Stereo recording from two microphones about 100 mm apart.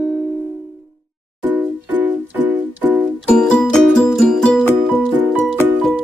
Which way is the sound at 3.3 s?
5° left (ahead or behind).